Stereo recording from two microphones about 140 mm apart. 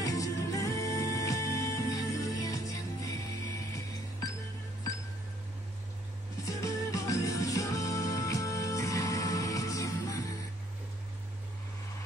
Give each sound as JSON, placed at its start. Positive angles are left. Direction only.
{"t": 0.0, "sound": "music", "side_deg": 25}
{"t": 6.4, "sound": "music", "side_deg": 25}